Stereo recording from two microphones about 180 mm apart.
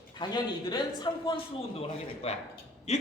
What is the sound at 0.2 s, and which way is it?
A man's voice, 25° left (ahead or behind).